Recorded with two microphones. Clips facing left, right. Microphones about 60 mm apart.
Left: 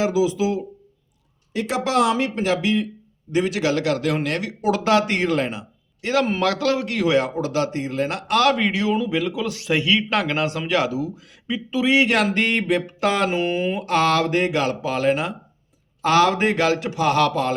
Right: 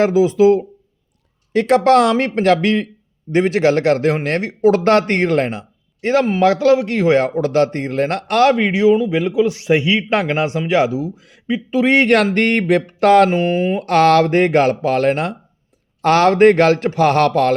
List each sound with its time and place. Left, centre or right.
0.0 s speech: right
3.3 s speech: right
6.4 s speech: right
6.9 s speech: right
8.4 s speech: right
13.8 s speech: right